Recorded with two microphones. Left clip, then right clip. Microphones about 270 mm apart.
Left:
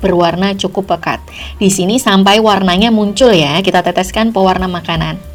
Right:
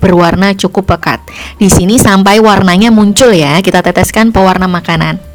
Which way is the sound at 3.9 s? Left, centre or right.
Right.